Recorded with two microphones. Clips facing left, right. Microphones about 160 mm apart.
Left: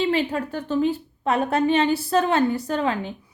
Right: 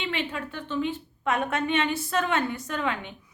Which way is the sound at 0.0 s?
40° left (ahead or behind).